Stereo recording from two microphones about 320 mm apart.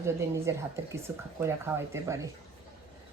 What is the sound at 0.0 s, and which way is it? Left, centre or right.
Speech, centre.